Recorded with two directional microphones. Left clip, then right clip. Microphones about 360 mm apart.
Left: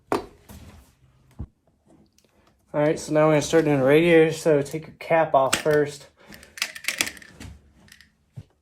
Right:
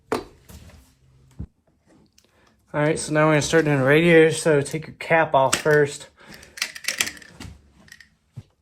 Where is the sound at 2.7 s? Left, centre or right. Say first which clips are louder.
Even; right.